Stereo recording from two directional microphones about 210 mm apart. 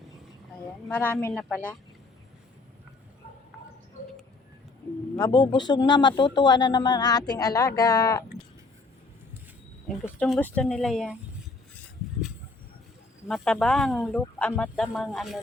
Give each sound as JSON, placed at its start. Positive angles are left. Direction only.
{"t": 0.9, "sound": "a woman's voice", "side_deg": 10}
{"t": 5.1, "sound": "a woman's voice", "side_deg": 20}
{"t": 9.9, "sound": "speech", "side_deg": 0}
{"t": 13.2, "sound": "speech", "side_deg": 5}